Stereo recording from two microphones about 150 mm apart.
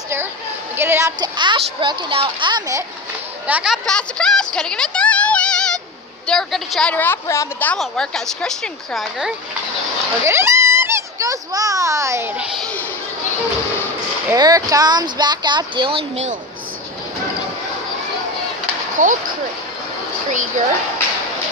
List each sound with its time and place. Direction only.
0.7 s a woman's voice: 15° right (ahead or behind)
1.3 s speech: 30° right (ahead or behind)
3.4 s a woman's voice: 5° right (ahead or behind); by 7.7 s 15° left (ahead or behind)
7.7 s a woman's voice: 5° left (ahead or behind)
10.2 s a child's voice: 15° right (ahead or behind)
14.3 s speech: 25° right (ahead or behind)
19.0 s speech: 55° right (ahead or behind)
20.2 s a sound: 55° right (ahead or behind)